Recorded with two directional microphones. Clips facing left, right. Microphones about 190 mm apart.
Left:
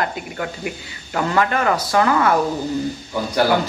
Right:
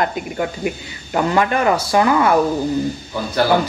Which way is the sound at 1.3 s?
20° right (ahead or behind).